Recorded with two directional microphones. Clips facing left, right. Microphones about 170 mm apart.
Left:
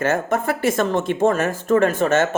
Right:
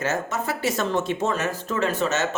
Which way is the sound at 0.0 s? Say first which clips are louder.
Left 6 dB; 55° left (ahead or behind).